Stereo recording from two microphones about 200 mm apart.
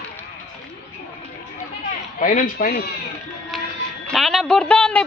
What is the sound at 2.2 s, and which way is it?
Speech, 40° left (ahead or behind).